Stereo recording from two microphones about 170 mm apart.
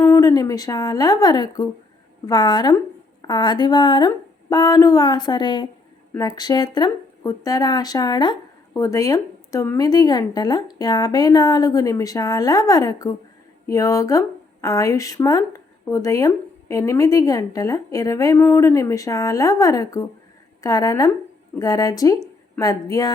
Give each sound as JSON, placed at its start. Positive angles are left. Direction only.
{"t": 0.1, "sound": "a woman's voice", "side_deg": 20}